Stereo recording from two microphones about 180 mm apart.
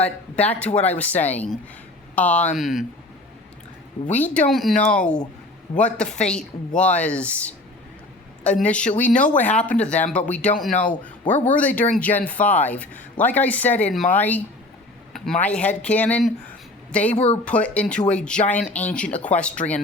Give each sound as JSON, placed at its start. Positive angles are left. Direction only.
{"t": 0.0, "sound": "speech", "side_deg": 10}
{"t": 4.1, "sound": "speech", "side_deg": 10}
{"t": 6.9, "sound": "speech", "side_deg": 5}
{"t": 10.7, "sound": "speech", "side_deg": 45}
{"t": 11.4, "sound": "speech", "side_deg": 10}